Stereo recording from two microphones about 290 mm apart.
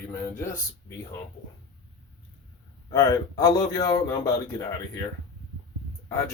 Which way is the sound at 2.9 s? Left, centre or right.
Centre.